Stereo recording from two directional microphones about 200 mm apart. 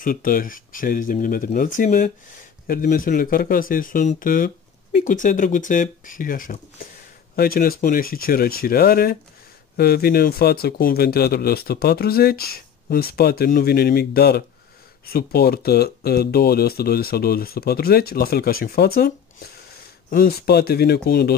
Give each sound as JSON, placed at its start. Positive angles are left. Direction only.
{"t": 0.0, "sound": "speech", "side_deg": 45}